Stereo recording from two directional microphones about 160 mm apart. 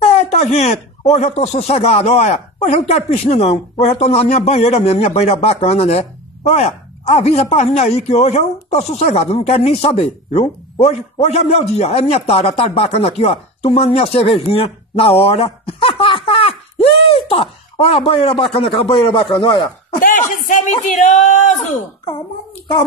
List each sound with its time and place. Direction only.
0.0 s a sound: 40° left (ahead or behind)
1.1 s speech: 45° left (ahead or behind)
20.0 s speech: 55° left (ahead or behind)